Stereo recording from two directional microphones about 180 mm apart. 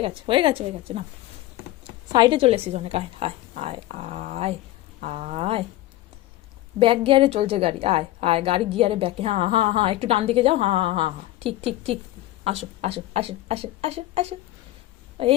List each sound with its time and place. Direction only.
0.0 s a woman's voice: 30° right (ahead or behind)
2.1 s a woman's voice: 25° right (ahead or behind)
6.7 s a woman's voice: 30° right (ahead or behind)